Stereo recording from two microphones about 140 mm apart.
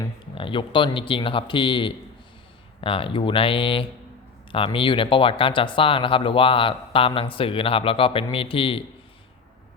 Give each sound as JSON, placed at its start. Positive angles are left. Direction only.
{"t": 0.3, "sound": "speech", "side_deg": 35}